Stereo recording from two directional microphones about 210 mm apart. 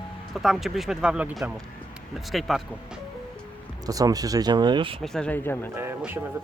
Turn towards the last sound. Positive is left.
turn(degrees=-10)  # may be behind; listen again after turning